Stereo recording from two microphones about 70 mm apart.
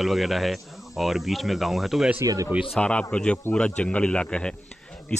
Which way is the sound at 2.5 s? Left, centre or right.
Centre.